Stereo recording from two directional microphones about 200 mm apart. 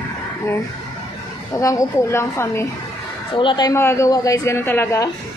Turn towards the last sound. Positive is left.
turn(degrees=15)  # may be behind; listen again after turning